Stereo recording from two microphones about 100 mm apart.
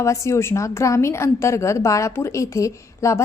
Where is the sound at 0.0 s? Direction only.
30° left (ahead or behind).